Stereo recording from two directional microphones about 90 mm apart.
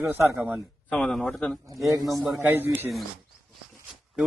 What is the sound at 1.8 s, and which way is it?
Speech, 40° right (ahead or behind).